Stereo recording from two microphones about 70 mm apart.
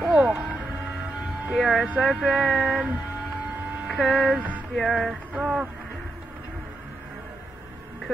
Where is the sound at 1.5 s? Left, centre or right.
Centre.